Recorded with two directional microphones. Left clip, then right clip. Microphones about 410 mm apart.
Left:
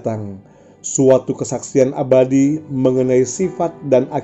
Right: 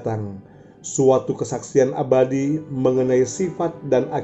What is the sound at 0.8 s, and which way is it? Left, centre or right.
Speech, centre.